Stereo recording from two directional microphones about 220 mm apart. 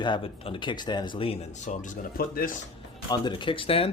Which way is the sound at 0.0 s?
25° left (ahead or behind).